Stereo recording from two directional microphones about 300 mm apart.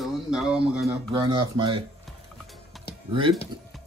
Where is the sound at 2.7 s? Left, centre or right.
Centre.